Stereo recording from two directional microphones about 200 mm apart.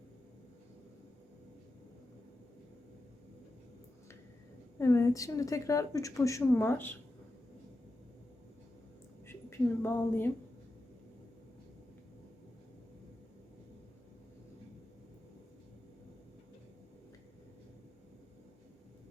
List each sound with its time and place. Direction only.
4.8 s a woman's voice: 15° left (ahead or behind)
9.2 s a woman's voice: 10° left (ahead or behind)